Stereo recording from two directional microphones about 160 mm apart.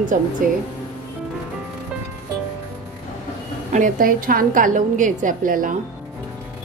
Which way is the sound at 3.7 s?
55° right (ahead or behind).